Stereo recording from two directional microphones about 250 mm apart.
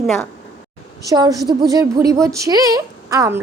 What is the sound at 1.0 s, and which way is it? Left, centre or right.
A woman's voice, centre.